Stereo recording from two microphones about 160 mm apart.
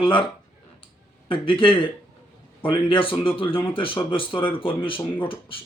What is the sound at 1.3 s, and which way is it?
Speech, 35° left (ahead or behind).